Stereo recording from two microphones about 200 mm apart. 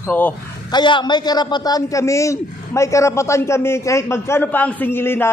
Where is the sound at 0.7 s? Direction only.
20° left (ahead or behind).